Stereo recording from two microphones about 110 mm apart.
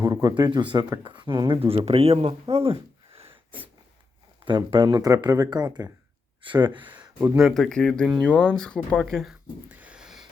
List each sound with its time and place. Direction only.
0.0 s speech: 35° right (ahead or behind); by 3.3 s 55° right (ahead or behind)
4.4 s speech: 45° right (ahead or behind)
6.4 s speech: 45° right (ahead or behind)
7.3 s speech: centre (ahead or behind)
9.6 s a sound: 10° right (ahead or behind)